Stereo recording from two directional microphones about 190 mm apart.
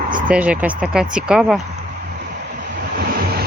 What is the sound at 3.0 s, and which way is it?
Vehicle, 55° right (ahead or behind).